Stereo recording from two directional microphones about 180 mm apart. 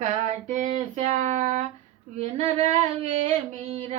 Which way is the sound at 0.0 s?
40° right (ahead or behind).